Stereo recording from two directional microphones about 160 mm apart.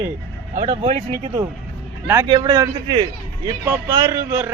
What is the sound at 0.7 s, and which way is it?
A man's voice, 35° right (ahead or behind).